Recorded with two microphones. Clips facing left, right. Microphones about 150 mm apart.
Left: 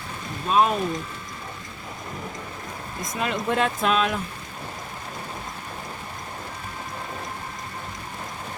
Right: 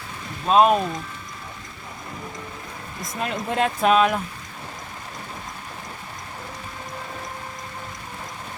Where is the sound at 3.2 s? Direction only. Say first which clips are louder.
Even; 45° right (ahead or behind).